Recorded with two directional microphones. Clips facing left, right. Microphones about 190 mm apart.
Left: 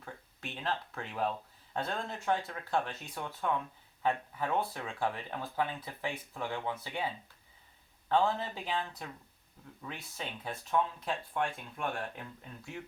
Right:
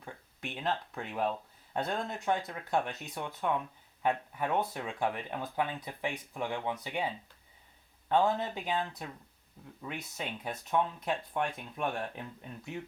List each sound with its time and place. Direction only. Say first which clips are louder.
0.0 s speech: right 2 dB; 15° right (ahead or behind)
8.1 s speech: right 2 dB; 15° right (ahead or behind)